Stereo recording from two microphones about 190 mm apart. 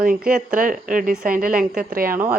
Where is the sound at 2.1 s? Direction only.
10° right (ahead or behind).